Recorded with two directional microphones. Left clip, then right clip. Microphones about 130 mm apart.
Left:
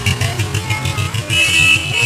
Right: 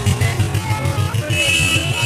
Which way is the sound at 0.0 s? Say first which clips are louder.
Left 3 dB; 5° left (ahead or behind).